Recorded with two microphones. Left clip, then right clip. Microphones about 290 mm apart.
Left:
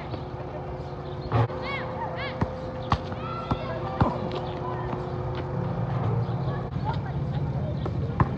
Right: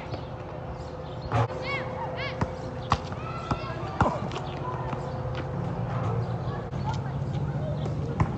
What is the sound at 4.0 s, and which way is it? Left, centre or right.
Basketball bounce, centre.